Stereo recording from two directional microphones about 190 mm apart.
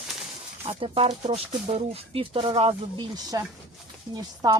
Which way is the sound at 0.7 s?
30° right (ahead or behind).